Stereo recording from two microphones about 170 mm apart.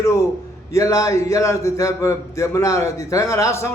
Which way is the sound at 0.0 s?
20° left (ahead or behind).